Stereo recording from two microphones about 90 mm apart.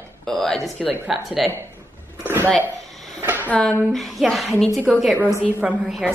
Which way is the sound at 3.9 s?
Centre (ahead or behind).